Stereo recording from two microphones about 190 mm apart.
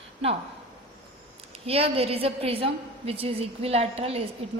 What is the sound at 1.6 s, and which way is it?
A woman's voice, 30° right (ahead or behind).